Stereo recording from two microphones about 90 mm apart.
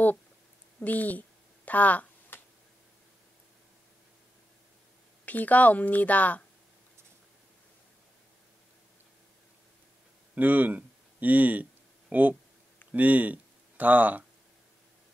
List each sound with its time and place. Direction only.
0.7 s speech: 20° left (ahead or behind)
1.7 s a sound: 15° left (ahead or behind)
5.2 s speech: 15° left (ahead or behind)
10.3 s speech: 20° right (ahead or behind)